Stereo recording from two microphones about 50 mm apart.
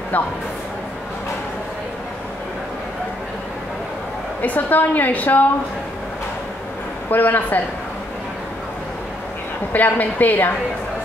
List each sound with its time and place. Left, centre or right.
4.4 s a woman's voice: left
7.1 s a woman's voice: left
9.7 s a woman's voice: left